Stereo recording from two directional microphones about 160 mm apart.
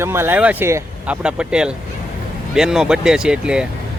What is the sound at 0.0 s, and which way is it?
Speech, 15° right (ahead or behind).